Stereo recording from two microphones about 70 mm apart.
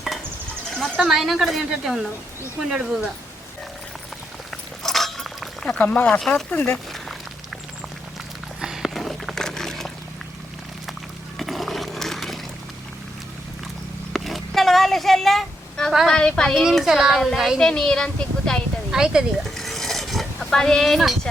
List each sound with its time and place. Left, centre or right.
0.8 s a child's voice: centre
4.5 s a sound: centre
5.7 s speech: left
6.1 s speech: centre
8.6 s a sound: centre
11.3 s a sound: centre
14.1 s a sound: centre
16.0 s a woman's voice: centre
16.8 s a child's voice: centre
17.6 s speech: centre
18.9 s speech: centre
19.5 s stir: centre